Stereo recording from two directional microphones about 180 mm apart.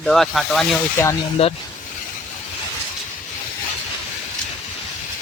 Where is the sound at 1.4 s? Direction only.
30° left (ahead or behind).